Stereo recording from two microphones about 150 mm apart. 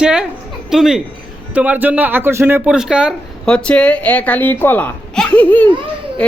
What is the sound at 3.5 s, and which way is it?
A woman's voice, 5° left (ahead or behind).